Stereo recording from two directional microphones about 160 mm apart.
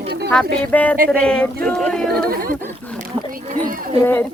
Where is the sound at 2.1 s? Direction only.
65° right (ahead or behind).